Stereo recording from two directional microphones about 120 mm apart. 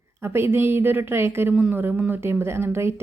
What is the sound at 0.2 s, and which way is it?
Speech, 20° right (ahead or behind).